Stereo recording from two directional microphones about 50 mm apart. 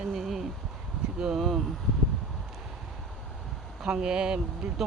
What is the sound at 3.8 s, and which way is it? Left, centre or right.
Speech, centre.